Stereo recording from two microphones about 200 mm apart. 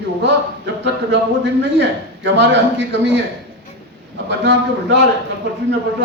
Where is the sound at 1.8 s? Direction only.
60° right (ahead or behind).